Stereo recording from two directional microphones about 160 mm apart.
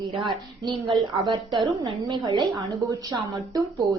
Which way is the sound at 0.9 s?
30° right (ahead or behind).